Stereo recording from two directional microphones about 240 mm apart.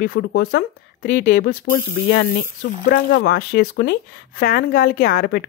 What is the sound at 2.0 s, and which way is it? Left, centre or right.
Speech, left.